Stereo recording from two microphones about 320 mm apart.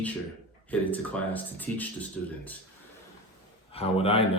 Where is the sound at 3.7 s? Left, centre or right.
Centre.